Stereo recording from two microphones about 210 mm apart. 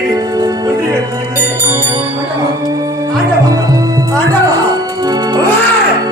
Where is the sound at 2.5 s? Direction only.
15° right (ahead or behind).